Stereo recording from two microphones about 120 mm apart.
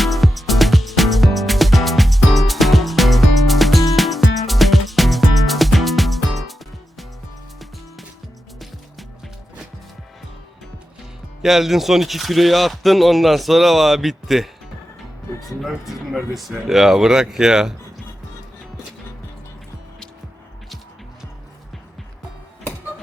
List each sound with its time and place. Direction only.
0.0 s music: centre (ahead or behind)
11.4 s speech: centre (ahead or behind)